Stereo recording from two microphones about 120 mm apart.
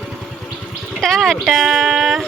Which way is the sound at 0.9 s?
5° left (ahead or behind).